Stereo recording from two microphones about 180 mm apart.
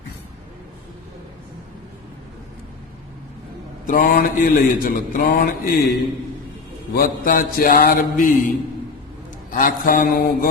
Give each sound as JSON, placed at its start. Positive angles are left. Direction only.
{"t": 3.8, "sound": "mantra", "side_deg": 55}